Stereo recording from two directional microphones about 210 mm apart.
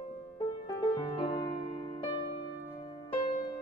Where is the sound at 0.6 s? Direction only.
20° left (ahead or behind).